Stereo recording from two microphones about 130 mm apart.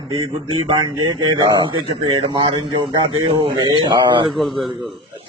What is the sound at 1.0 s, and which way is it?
A man's voice, 35° right (ahead or behind).